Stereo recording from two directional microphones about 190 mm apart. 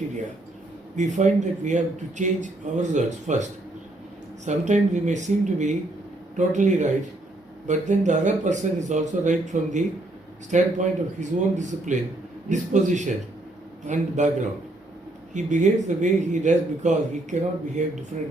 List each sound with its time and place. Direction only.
0.9 s speech: 40° right (ahead or behind)